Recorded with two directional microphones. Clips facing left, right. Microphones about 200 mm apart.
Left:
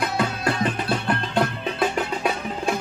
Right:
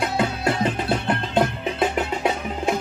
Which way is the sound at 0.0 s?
20° right (ahead or behind).